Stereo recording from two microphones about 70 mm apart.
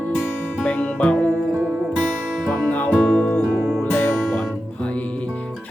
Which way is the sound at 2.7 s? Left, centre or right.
Left.